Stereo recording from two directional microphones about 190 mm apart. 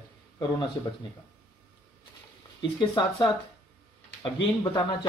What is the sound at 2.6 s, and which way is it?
Speech, 25° left (ahead or behind).